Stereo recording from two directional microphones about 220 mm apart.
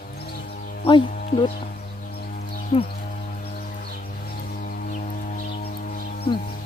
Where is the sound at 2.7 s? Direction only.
30° left (ahead or behind).